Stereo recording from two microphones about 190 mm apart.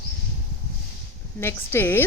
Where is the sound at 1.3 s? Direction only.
10° left (ahead or behind).